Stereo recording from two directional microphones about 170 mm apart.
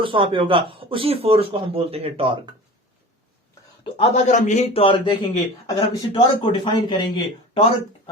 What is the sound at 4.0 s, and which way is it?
A man's voice, 40° left (ahead or behind).